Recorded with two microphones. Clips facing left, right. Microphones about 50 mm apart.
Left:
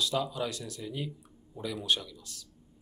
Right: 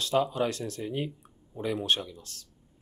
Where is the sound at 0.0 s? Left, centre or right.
Right.